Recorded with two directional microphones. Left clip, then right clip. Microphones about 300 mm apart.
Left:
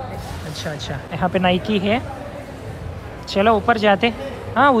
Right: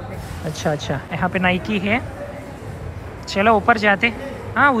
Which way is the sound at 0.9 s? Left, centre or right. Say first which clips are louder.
Left 1 dB; centre.